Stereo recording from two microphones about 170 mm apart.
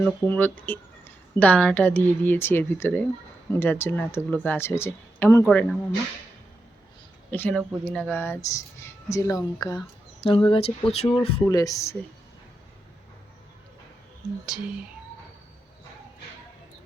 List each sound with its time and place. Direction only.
0.0 s speech: 10° left (ahead or behind)
5.5 s speech: 5° left (ahead or behind)
7.3 s speech: 10° left (ahead or behind)
10.2 s speech: 30° left (ahead or behind)
11.4 s speech: 20° left (ahead or behind)